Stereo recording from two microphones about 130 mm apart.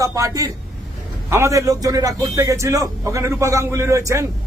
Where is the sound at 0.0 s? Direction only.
25° right (ahead or behind).